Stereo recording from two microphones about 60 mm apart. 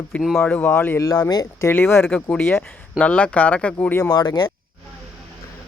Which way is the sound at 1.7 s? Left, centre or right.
Left.